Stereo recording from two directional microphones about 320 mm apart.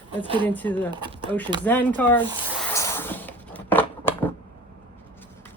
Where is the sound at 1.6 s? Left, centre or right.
Centre.